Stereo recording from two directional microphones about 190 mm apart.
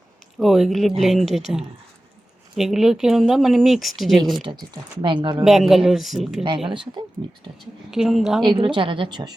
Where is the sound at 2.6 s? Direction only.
Centre (ahead or behind).